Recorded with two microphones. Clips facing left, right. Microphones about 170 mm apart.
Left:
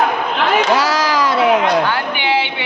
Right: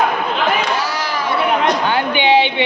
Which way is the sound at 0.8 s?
90° left.